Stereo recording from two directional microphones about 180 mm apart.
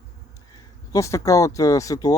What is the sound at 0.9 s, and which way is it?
Speech, 15° left (ahead or behind).